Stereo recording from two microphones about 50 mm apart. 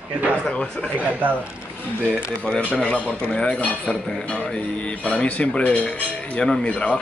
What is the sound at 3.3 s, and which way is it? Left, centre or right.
Speech, left.